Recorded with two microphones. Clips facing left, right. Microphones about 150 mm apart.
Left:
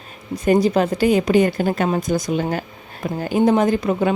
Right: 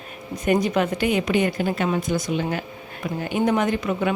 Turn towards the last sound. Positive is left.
turn(degrees=35)  # may be behind; listen again after turning